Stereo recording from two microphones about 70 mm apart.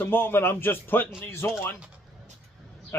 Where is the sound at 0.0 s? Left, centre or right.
Left.